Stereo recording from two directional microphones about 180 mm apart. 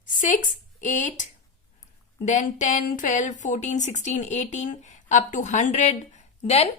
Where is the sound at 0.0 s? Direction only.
45° left (ahead or behind).